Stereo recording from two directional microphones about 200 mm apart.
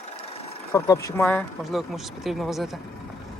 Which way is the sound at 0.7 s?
15° left (ahead or behind).